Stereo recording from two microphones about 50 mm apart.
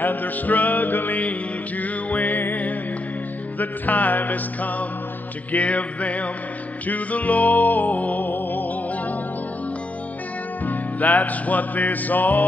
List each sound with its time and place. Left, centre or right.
0.0 s music: left
10.6 s music: left